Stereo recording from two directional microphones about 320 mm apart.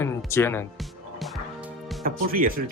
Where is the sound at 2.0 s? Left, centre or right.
Right.